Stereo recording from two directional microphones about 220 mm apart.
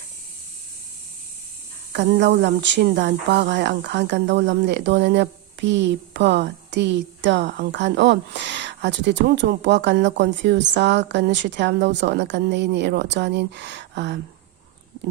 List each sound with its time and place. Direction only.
1.9 s speech: 50° right (ahead or behind)